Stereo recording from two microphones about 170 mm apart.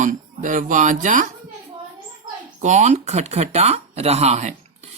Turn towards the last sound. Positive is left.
turn(degrees=-40)  # may be behind; listen again after turning